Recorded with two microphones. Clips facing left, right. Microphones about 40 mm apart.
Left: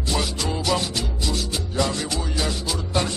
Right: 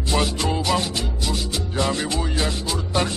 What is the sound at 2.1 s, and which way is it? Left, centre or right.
Music, centre.